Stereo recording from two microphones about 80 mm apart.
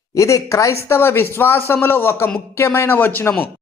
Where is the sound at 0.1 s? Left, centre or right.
Left.